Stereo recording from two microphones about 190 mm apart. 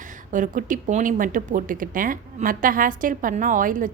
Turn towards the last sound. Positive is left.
turn(degrees=-45)  # may be behind; listen again after turning